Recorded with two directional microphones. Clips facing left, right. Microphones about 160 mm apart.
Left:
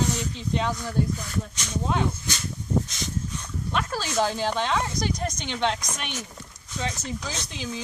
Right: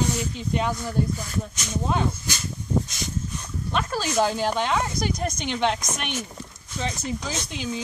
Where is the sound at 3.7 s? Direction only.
5° right (ahead or behind).